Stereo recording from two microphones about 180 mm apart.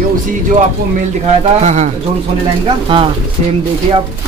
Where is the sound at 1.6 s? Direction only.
40° right (ahead or behind).